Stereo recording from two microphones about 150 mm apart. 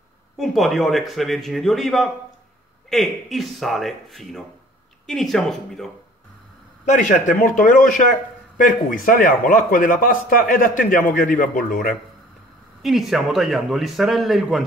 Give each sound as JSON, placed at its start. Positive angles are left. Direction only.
{"t": 0.4, "sound": "a man's voice", "side_deg": 0}
{"t": 6.9, "sound": "a man's voice", "side_deg": 55}
{"t": 12.8, "sound": "a man's voice", "side_deg": 0}